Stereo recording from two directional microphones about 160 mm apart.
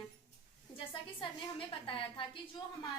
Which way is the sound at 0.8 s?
30° left (ahead or behind).